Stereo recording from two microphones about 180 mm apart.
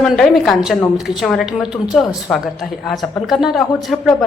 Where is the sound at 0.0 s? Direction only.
Centre (ahead or behind).